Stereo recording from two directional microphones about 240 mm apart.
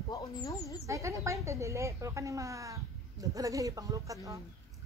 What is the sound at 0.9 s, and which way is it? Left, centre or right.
Speech, centre.